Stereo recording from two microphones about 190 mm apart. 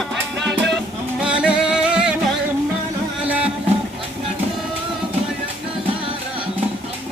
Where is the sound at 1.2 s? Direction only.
5° right (ahead or behind).